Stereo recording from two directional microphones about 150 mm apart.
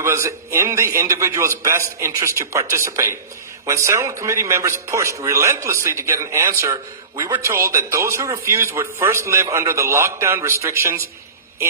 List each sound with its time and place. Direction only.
0.0 s a man's voice: 20° right (ahead or behind)